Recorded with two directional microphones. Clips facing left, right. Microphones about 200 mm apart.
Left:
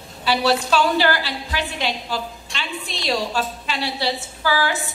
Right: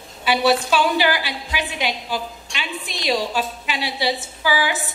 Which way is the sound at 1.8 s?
5° right (ahead or behind).